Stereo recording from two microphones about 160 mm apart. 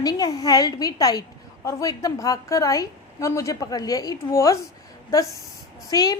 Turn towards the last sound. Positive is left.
turn(degrees=25)  # may be behind; listen again after turning